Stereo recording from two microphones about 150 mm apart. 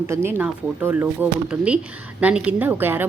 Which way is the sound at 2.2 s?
10° right (ahead or behind).